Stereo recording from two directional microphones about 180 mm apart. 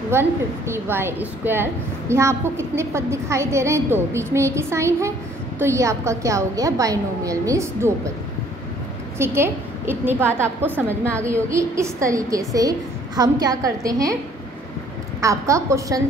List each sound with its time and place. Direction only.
0.1 s a woman's voice: 15° right (ahead or behind)
9.2 s a woman's voice: 15° right (ahead or behind)
15.1 s a woman's voice: 15° right (ahead or behind)